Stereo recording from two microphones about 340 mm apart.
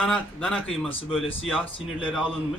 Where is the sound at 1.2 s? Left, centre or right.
Centre.